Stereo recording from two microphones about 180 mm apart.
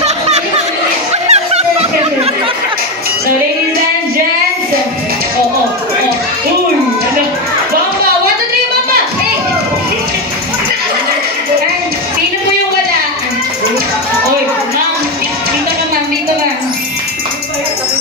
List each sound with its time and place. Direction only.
1.2 s music: 35° right (ahead or behind)